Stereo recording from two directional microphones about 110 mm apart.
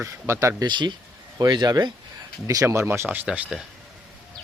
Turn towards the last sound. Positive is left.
turn(degrees=-15)  # may be behind; listen again after turning